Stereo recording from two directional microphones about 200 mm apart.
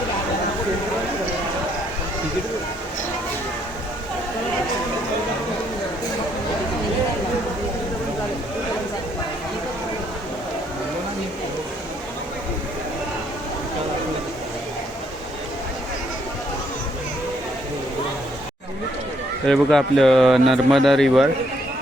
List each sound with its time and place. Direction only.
19.5 s speech: centre (ahead or behind)